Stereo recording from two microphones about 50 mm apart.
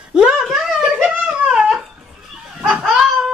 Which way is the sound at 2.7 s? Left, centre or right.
Centre.